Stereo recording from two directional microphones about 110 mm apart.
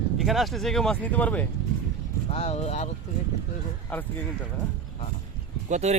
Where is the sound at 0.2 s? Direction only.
Centre (ahead or behind).